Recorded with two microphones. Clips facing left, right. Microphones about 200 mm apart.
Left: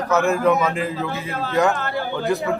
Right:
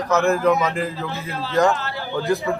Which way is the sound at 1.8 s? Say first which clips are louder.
Left 2 dB; 55° left (ahead or behind).